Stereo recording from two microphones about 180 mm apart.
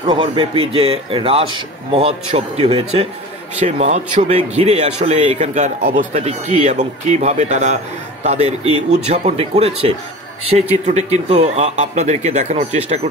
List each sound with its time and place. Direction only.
0.0 s speech: 25° right (ahead or behind)
5.8 s speech: 55° right (ahead or behind)
6.1 s speech: 35° right (ahead or behind)